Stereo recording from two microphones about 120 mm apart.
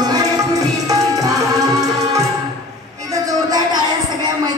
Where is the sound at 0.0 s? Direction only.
30° right (ahead or behind).